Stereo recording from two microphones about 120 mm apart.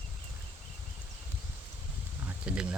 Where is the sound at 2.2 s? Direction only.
10° right (ahead or behind).